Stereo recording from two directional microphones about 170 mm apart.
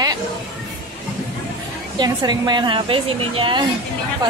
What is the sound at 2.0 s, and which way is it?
A woman's voice, 25° right (ahead or behind).